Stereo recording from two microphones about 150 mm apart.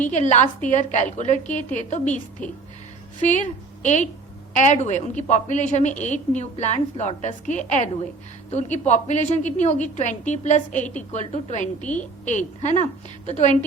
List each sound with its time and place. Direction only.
0.0 s a woman's voice: 50° left (ahead or behind)
3.2 s a woman's voice: 55° left (ahead or behind)
11.8 s a woman's voice: 10° left (ahead or behind)
12.2 s a woman's voice: 55° left (ahead or behind)